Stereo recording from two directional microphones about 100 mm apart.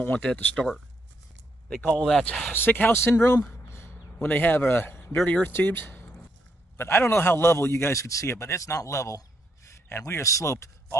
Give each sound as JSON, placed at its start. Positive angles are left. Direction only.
{"t": 0.0, "sound": "speech", "side_deg": 10}
{"t": 1.7, "sound": "a man's voice", "side_deg": 15}
{"t": 3.4, "sound": "a sound", "side_deg": 25}
{"t": 5.2, "sound": "a man's voice", "side_deg": 15}